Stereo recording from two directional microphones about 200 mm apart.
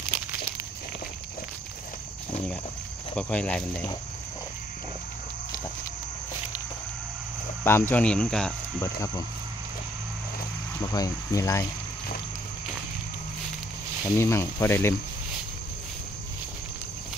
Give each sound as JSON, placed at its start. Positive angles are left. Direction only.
{"t": 3.2, "sound": "speech", "side_deg": 5}
{"t": 7.6, "sound": "speech", "side_deg": 10}
{"t": 10.8, "sound": "speech", "side_deg": 20}
{"t": 14.0, "sound": "speech", "side_deg": 15}